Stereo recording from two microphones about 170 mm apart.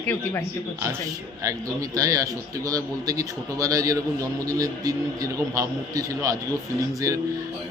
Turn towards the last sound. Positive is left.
turn(degrees=-20)  # may be behind; listen again after turning